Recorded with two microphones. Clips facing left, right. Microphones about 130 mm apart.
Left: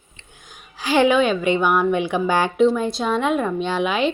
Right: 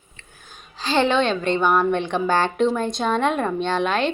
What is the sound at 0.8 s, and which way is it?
A woman's voice, 10° left (ahead or behind).